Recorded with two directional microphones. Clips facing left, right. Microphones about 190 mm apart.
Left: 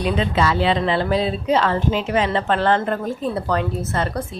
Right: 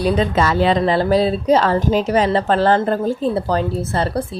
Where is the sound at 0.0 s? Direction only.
40° right (ahead or behind).